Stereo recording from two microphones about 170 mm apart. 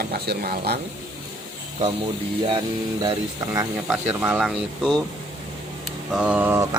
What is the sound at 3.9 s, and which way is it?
Speech, 10° right (ahead or behind).